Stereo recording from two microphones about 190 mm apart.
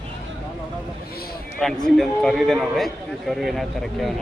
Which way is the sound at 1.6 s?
Centre (ahead or behind).